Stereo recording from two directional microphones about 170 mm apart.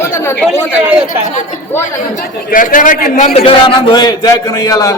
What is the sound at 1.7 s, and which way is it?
Speech, 15° left (ahead or behind).